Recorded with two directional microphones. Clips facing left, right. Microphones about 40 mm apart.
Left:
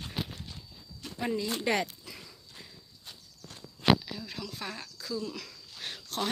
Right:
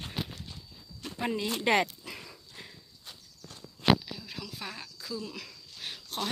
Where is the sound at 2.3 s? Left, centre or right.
Right.